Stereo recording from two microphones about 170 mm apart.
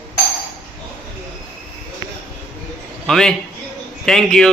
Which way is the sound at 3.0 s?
5° left (ahead or behind).